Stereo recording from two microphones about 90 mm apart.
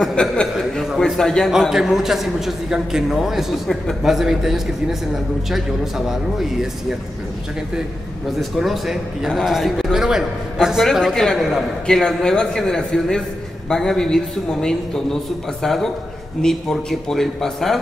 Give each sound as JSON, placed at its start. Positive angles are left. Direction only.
{"t": 0.0, "sound": "a man's voice", "side_deg": 5}
{"t": 1.5, "sound": "a man's voice", "side_deg": -5}
{"t": 8.4, "sound": "a man's voice", "side_deg": 0}